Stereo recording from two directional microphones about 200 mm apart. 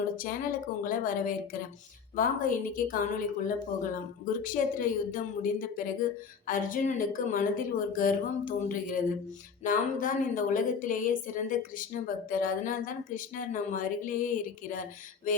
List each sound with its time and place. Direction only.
0.8 s speech: 45° left (ahead or behind)